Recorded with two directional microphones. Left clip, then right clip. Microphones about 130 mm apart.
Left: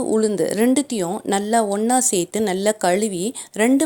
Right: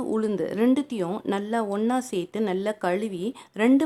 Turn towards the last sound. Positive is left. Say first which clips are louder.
# left 5 dB
turn(degrees=30)  # may be behind; listen again after turning